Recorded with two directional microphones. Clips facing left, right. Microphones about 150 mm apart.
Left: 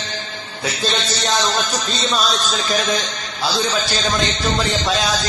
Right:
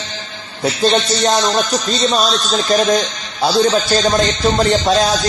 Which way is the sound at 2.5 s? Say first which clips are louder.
Right 7 dB; 45° right (ahead or behind).